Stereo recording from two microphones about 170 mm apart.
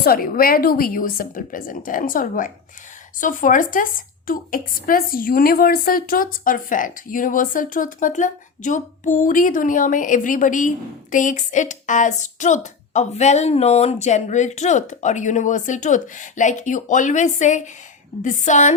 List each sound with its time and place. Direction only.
0.0 s a woman's voice: 60° left (ahead or behind)